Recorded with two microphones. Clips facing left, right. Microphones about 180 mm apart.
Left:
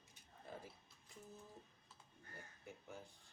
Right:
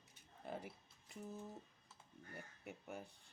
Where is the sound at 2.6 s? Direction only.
65° right (ahead or behind).